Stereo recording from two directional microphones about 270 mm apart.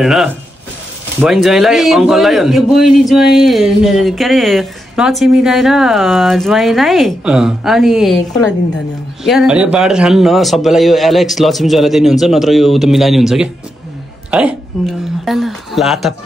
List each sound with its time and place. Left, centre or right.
0.0 s a woman's voice: centre